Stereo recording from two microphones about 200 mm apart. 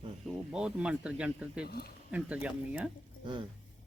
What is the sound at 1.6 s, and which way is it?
Speech, 50° left (ahead or behind).